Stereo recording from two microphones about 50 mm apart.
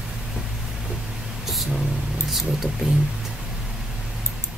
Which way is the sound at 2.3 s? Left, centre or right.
Centre.